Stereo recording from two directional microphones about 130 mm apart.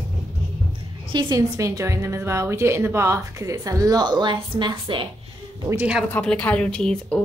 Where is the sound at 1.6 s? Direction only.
25° right (ahead or behind); by 5.1 s 40° right (ahead or behind).